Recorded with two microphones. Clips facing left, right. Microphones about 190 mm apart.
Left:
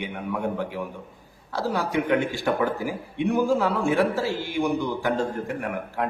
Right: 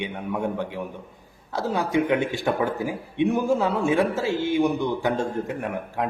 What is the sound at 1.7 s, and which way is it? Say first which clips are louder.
A man's voice: right 2 dB; 20° right (ahead or behind).